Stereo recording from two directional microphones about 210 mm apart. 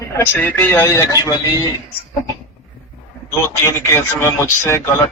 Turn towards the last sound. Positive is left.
turn(degrees=10)  # may be behind; listen again after turning